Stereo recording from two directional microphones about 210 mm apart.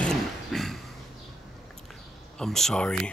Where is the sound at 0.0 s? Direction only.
Centre (ahead or behind).